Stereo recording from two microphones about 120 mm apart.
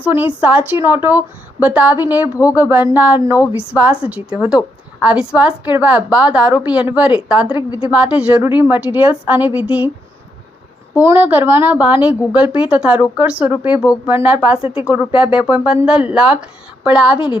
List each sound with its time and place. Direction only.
0.0 s a woman's voice: 15° right (ahead or behind)
10.9 s a woman's voice: 20° right (ahead or behind)